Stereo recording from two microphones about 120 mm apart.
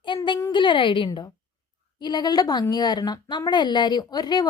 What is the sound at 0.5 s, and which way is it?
A woman's voice, 40° left (ahead or behind).